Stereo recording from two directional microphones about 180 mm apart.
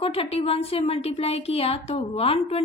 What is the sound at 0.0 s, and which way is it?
A woman's voice, 30° left (ahead or behind).